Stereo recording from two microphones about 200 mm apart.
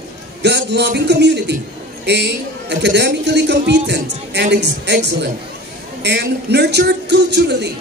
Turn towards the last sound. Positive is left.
turn(degrees=-60)  # may be behind; listen again after turning